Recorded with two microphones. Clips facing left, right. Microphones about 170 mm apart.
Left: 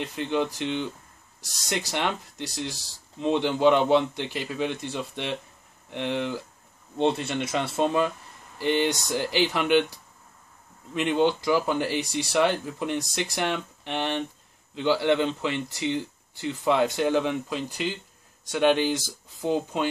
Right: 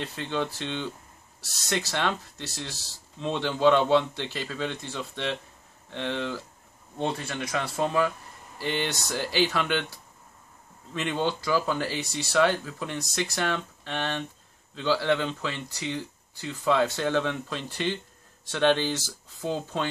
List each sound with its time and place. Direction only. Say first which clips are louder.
0.0 s a man's voice: left 3 dB; 15° left (ahead or behind)
11.0 s a man's voice: left 5 dB; 15° left (ahead or behind)